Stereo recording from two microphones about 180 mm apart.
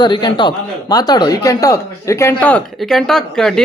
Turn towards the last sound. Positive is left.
turn(degrees=5)  # may be behind; listen again after turning